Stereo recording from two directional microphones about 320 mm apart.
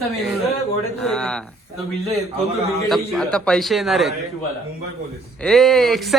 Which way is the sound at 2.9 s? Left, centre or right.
Centre.